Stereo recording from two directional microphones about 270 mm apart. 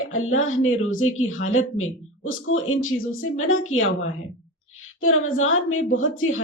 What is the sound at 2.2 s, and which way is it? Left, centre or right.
Speech, left.